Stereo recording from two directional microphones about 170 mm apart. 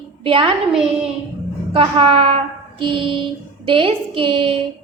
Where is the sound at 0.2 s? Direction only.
30° right (ahead or behind).